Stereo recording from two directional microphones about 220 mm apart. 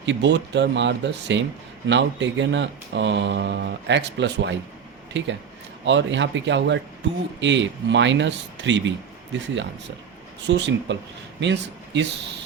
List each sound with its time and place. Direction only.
0.0 s speech: 55° right (ahead or behind)
10.4 s speech: 55° right (ahead or behind)